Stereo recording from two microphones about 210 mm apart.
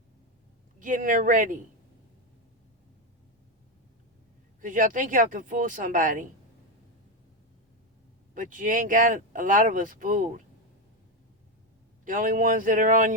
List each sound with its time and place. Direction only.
0.8 s speech: 40° right (ahead or behind)
4.6 s speech: 40° right (ahead or behind)
8.4 s speech: 40° right (ahead or behind)
12.0 s speech: 40° right (ahead or behind)